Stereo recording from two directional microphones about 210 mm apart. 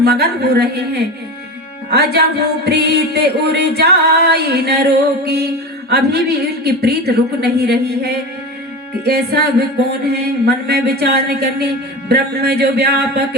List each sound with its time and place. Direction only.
0.0 s music: 50° right (ahead or behind)